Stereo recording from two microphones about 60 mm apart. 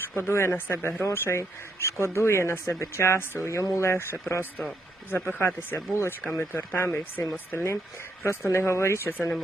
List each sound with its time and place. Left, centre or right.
0.2 s speech: left
3.9 s speech: left